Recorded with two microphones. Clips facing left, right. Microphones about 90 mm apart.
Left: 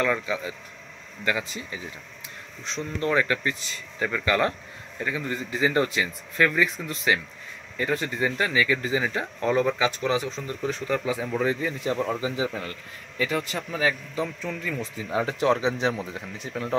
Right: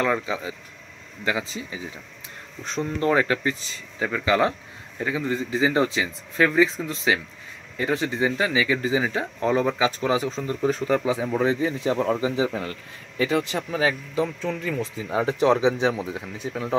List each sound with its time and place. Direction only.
0.0 s speech: 25° right (ahead or behind)
2.6 s speech: 45° right (ahead or behind)
3.0 s speech: 30° right (ahead or behind)